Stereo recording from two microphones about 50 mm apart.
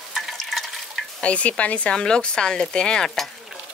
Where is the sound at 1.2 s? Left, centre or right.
Left.